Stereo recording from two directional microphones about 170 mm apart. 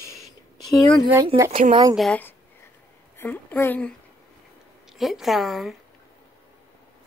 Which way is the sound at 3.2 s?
10° left (ahead or behind).